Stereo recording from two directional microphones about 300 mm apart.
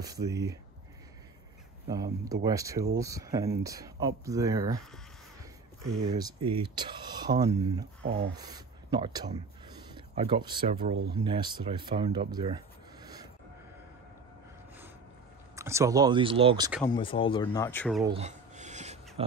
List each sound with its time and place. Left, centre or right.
0.0 s speech: centre
2.4 s speech: centre
6.0 s speech: centre
8.0 s speech: right
8.4 s speech: centre
15.5 s speech: centre
16.8 s speech: centre
18.0 s a sound: centre
19.2 s speech: centre